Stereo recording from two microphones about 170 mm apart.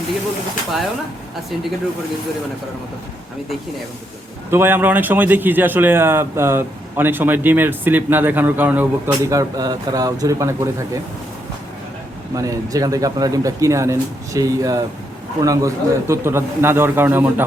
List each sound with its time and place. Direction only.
4.5 s a man's voice: 10° right (ahead or behind)
12.4 s a man's voice: 20° right (ahead or behind)